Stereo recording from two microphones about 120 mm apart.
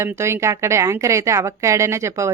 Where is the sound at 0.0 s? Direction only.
25° right (ahead or behind).